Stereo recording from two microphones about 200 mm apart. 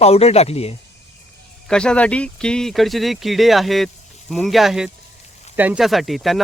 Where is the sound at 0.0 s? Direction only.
30° left (ahead or behind).